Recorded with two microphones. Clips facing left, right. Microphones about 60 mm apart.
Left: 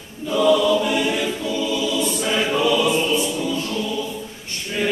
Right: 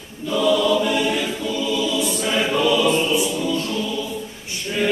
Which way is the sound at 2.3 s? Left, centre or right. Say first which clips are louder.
Right 1 dB; centre.